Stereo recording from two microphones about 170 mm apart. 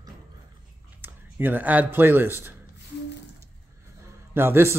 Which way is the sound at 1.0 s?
10° right (ahead or behind).